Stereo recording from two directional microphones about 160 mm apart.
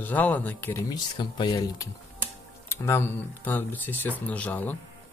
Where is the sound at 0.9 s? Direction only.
30° left (ahead or behind); by 4.8 s 10° left (ahead or behind).